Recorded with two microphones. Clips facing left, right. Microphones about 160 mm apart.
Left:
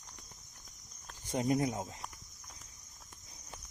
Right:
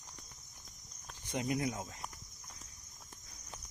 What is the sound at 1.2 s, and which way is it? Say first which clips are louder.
Speech: left 4 dB; 40° left (ahead or behind).